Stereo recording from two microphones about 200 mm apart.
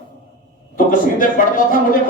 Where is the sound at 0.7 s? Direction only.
45° left (ahead or behind).